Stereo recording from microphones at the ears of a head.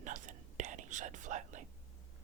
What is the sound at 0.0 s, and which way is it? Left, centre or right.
Whispering, right.